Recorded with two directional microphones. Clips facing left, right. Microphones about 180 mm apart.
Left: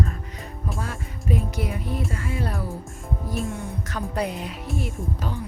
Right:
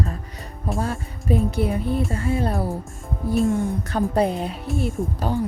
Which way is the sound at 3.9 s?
30° right (ahead or behind).